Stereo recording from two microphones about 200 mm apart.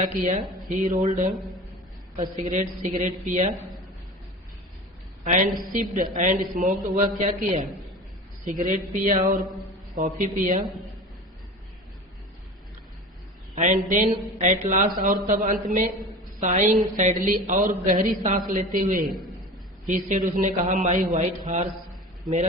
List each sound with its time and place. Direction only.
0.0 s a man's voice: 40° right (ahead or behind)
2.4 s a man's voice: 40° right (ahead or behind)
5.2 s a woman's voice: 40° right (ahead or behind)
13.6 s a man's voice: 40° right (ahead or behind)